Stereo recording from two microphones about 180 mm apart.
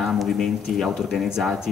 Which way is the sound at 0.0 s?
Centre (ahead or behind).